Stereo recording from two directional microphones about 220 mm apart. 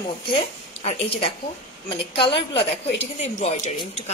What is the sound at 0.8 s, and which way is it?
Speech, 25° left (ahead or behind).